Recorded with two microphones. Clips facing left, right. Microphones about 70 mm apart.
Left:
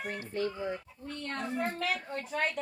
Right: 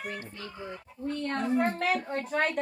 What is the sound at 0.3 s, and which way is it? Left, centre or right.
Speech, left.